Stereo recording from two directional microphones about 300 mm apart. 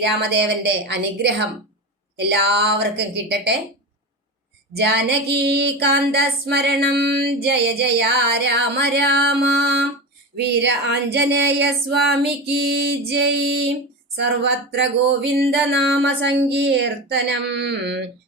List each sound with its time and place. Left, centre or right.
0.2 s female singing: right
4.9 s female singing: right
14.8 s female singing: right